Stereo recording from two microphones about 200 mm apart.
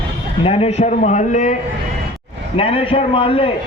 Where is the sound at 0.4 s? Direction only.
30° left (ahead or behind).